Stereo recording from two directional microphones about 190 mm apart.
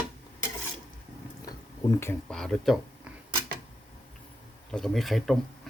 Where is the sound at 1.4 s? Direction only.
20° left (ahead or behind).